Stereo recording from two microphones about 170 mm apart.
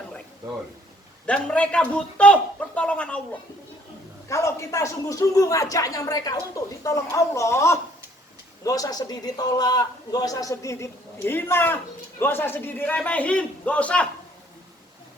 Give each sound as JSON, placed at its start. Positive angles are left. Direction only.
{"t": 1.3, "sound": "a man's voice", "side_deg": 5}
{"t": 4.3, "sound": "a man's voice", "side_deg": 15}